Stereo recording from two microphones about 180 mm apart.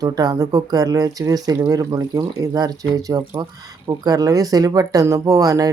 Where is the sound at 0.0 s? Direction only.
20° right (ahead or behind).